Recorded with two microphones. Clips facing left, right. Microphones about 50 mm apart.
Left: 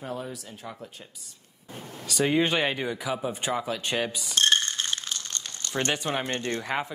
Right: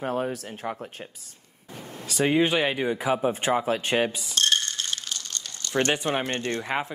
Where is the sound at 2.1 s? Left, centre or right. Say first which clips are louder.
Right 2 dB; centre.